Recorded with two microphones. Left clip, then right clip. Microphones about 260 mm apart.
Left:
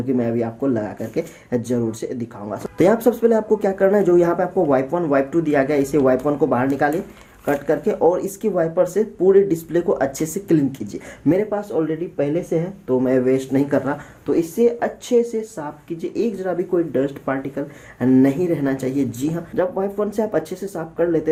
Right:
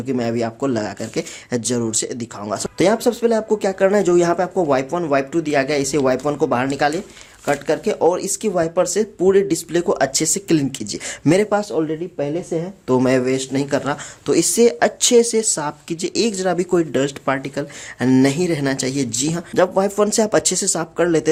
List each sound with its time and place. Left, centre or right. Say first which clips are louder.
0.1 s speech: right 1 dB; right
11.3 s speech: right 3 dB; right
12.9 s speech: right 1 dB; right
14.3 s speech: right 3 dB; right